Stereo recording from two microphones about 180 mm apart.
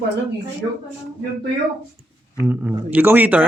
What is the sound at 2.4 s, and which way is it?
Speech, 10° right (ahead or behind).